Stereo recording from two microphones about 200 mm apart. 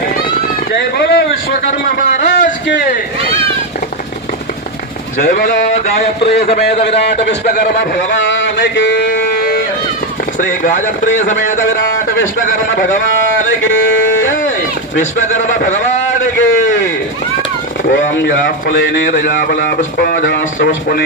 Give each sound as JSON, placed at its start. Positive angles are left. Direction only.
{"t": 0.7, "sound": "a sound", "side_deg": 60}
{"t": 2.6, "sound": "speech", "side_deg": 60}
{"t": 5.1, "sound": "a man's voice", "side_deg": 40}
{"t": 7.0, "sound": "speech", "side_deg": 55}
{"t": 7.4, "sound": "a man's voice", "side_deg": 45}
{"t": 8.1, "sound": "a sound", "side_deg": 70}
{"t": 9.0, "sound": "music", "side_deg": 45}
{"t": 10.4, "sound": "a man's voice", "side_deg": 40}
{"t": 14.9, "sound": "a man's voice", "side_deg": 40}
{"t": 17.8, "sound": "a man's voice", "side_deg": 50}